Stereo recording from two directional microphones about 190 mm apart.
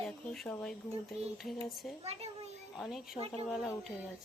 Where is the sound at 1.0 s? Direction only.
Centre (ahead or behind).